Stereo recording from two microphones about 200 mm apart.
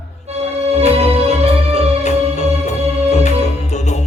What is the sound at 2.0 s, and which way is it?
Music, 35° left (ahead or behind).